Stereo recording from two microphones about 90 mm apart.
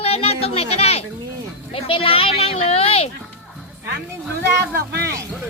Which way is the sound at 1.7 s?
90° left.